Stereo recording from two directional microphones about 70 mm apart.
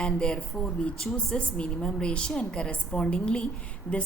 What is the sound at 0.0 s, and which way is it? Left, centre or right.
A woman's voice, centre.